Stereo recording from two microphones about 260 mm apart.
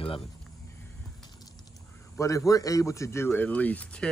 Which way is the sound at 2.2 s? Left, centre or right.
Centre.